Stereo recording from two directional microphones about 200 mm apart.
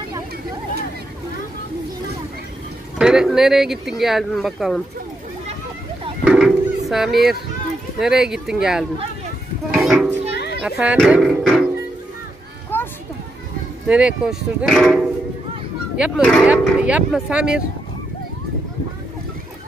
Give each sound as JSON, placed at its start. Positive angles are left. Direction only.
{"t": 3.0, "sound": "speech", "side_deg": -5}
{"t": 6.2, "sound": "a sound", "side_deg": 0}
{"t": 8.0, "sound": "speech", "side_deg": 0}
{"t": 9.7, "sound": "a sound", "side_deg": 0}
{"t": 10.3, "sound": "children playing", "side_deg": 55}
{"t": 10.8, "sound": "speech", "side_deg": -5}
{"t": 12.7, "sound": "children playing", "side_deg": 10}
{"t": 13.8, "sound": "speech", "side_deg": -5}
{"t": 16.2, "sound": "speech", "side_deg": 5}